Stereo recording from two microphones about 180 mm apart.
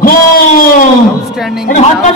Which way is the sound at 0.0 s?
50° left (ahead or behind).